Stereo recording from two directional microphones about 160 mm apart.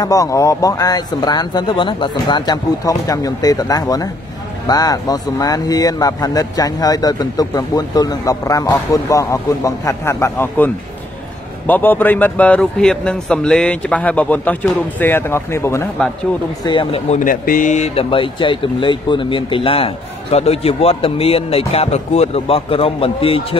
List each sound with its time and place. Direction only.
0.0 s speech: 20° left (ahead or behind)
16.6 s speech: 30° left (ahead or behind)
17.1 s speech: 55° left (ahead or behind); by 23.6 s 35° left (ahead or behind)